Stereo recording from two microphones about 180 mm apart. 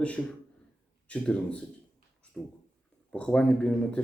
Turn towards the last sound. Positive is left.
turn(degrees=5)  # may be behind; listen again after turning